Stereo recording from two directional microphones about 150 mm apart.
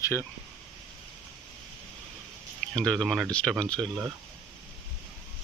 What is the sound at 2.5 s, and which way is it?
Speech, 5° left (ahead or behind).